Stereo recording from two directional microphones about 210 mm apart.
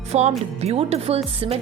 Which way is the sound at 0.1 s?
30° right (ahead or behind).